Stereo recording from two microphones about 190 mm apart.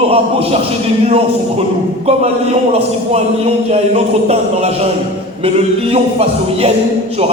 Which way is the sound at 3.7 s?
30° right (ahead or behind).